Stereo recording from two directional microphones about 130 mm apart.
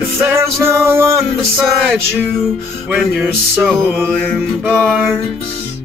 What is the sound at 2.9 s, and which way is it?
Music, 15° right (ahead or behind).